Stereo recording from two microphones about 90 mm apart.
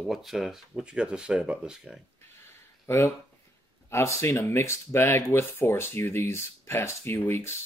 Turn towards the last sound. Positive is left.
turn(degrees=25)  # may be behind; listen again after turning